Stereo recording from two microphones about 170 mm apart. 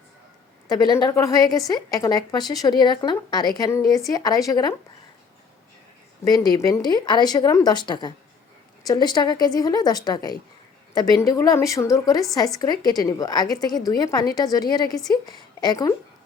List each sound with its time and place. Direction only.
0.7 s a woman's voice: 20° left (ahead or behind)
6.5 s a woman's voice: 25° left (ahead or behind)
14.8 s a woman's voice: centre (ahead or behind)
15.1 s a woman's voice: 25° left (ahead or behind)